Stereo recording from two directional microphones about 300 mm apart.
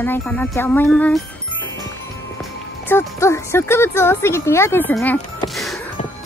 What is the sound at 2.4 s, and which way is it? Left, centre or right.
Speech, centre.